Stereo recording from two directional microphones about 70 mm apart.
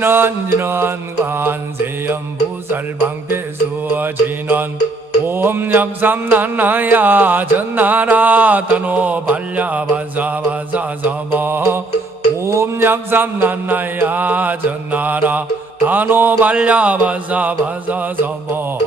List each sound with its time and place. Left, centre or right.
0.0 s music: right
2.7 s music: right
3.9 s mantra: right